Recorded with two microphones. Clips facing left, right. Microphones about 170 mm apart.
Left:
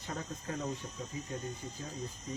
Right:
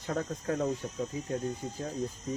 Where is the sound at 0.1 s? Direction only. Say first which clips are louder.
Right 8 dB; 50° right (ahead or behind).